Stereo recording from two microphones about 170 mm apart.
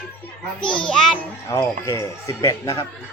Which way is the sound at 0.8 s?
5° left (ahead or behind).